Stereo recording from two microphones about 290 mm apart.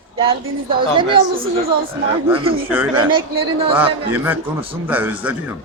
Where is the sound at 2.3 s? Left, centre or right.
Centre.